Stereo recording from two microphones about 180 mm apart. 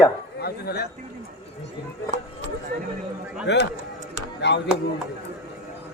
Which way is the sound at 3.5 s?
80° left.